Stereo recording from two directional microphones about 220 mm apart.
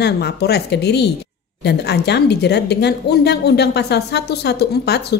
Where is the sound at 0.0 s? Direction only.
50° left (ahead or behind).